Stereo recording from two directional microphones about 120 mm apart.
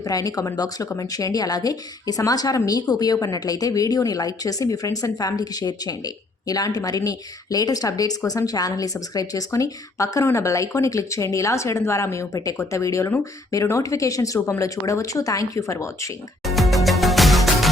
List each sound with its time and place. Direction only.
0.0 s speech: 30° left (ahead or behind)
16.4 s music: centre (ahead or behind)